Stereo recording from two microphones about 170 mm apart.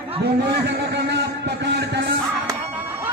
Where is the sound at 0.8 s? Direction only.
90° right.